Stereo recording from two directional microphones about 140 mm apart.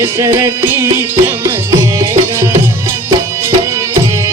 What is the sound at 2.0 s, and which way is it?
Music, 20° right (ahead or behind).